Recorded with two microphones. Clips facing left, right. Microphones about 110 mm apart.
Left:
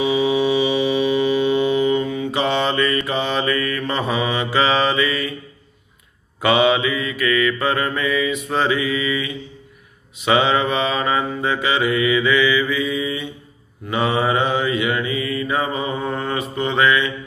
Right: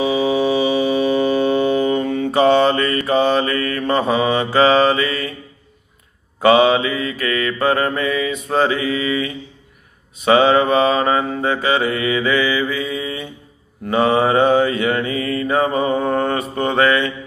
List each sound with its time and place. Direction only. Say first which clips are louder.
0.0 s mantra: right 1 dB; 35° right (ahead or behind)
6.4 s mantra: right 4 dB; 35° right (ahead or behind)